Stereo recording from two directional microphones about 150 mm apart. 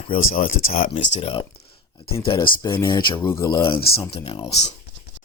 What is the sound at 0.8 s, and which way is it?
Speech, 40° left (ahead or behind).